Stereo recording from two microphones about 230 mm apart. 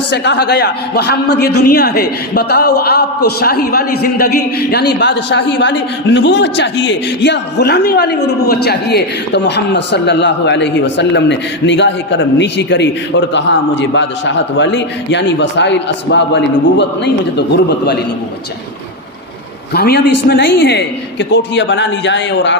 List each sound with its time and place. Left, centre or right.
0.1 s speech: left
4.9 s speech: left
19.7 s speech: left